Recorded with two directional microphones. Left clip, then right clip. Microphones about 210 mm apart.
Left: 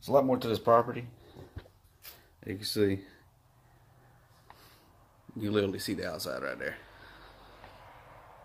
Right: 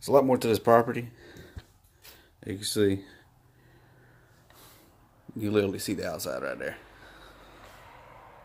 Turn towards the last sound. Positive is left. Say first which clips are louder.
# right 2 dB
turn(degrees=-15)  # may be behind; listen again after turning